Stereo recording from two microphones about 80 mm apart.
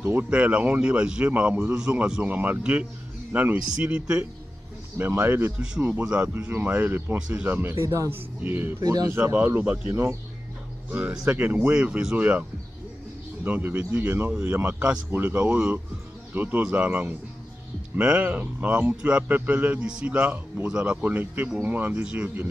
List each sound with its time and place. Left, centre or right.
0.0 s a man's voice: right
4.9 s a man's voice: right
6.3 s a man's voice: right
7.8 s speech: right
8.1 s a man's voice: right
8.8 s speech: right
9.1 s a man's voice: right